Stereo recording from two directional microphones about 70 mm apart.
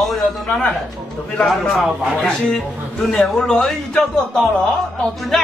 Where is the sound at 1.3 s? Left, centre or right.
Centre.